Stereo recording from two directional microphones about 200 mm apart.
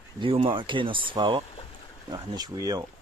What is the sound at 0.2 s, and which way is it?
Speech, 25° right (ahead or behind).